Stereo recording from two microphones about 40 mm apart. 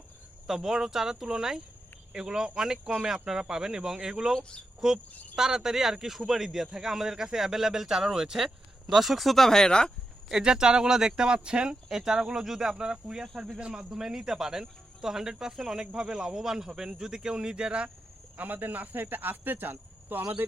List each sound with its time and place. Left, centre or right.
0.4 s a man's voice: centre
9.5 s speech: centre
10.4 s a man's voice: centre
13.9 s a man's voice: centre
18.3 s speech: right